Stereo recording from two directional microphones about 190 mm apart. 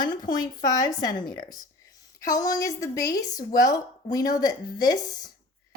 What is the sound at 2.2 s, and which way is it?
A woman's voice, 20° left (ahead or behind).